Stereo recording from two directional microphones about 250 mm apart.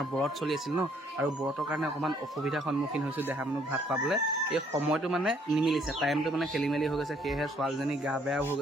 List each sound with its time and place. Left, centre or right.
0.2 s speech: centre